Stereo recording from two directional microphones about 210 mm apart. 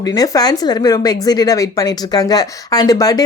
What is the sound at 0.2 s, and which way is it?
A woman's voice, 20° left (ahead or behind).